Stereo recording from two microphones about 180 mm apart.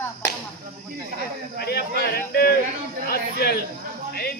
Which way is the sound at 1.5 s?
60° left (ahead or behind).